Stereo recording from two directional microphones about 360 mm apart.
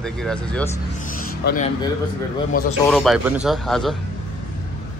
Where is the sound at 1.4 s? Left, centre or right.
Left.